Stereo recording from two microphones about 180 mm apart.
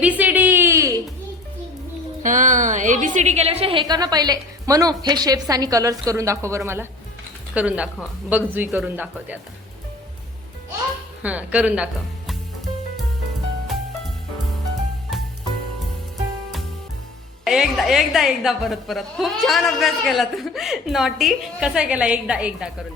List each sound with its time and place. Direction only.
0.0 s a sound: 10° right (ahead or behind)
2.2 s a woman's voice: 45° right (ahead or behind); by 9.4 s 10° right (ahead or behind)
11.2 s speech: 10° right (ahead or behind)
17.4 s a woman's voice: centre (ahead or behind)